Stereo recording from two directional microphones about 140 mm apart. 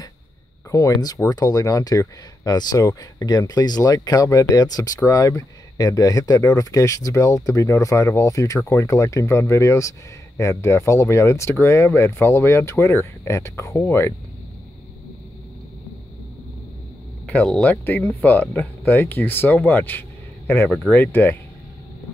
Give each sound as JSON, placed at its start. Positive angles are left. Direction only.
{"t": 0.7, "sound": "speech", "side_deg": 25}
{"t": 17.3, "sound": "speech", "side_deg": 10}